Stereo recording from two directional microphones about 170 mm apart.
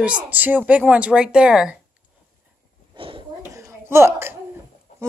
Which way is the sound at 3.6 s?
15° right (ahead or behind).